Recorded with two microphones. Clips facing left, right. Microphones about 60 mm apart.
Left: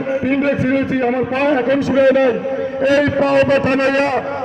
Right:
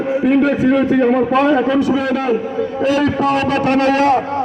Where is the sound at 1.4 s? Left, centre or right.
Left.